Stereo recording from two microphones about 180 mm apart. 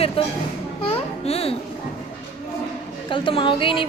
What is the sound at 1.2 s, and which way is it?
Speech, 35° left (ahead or behind).